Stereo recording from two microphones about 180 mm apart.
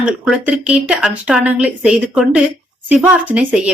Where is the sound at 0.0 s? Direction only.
5° right (ahead or behind).